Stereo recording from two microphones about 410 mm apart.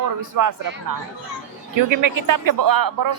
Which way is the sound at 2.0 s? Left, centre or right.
Right.